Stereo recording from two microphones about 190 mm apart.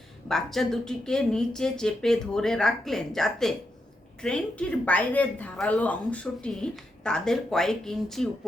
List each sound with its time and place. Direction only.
0.3 s speech: centre (ahead or behind)